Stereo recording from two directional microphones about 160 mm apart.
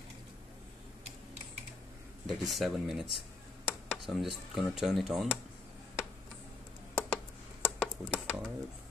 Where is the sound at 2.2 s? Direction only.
Centre (ahead or behind).